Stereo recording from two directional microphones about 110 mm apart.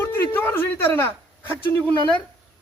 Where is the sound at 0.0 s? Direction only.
20° left (ahead or behind).